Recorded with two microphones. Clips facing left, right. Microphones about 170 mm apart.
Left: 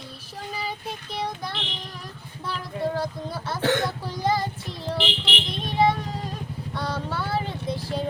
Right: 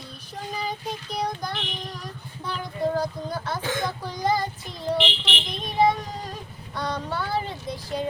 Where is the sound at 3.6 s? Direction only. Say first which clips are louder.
Left 10 dB; 70° left (ahead or behind).